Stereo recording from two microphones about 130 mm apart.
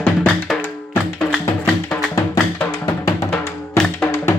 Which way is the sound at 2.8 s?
25° left (ahead or behind).